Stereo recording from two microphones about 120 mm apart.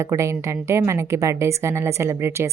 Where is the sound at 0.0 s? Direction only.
25° right (ahead or behind).